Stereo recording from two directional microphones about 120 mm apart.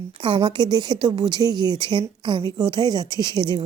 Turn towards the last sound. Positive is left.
turn(degrees=-35)  # may be behind; listen again after turning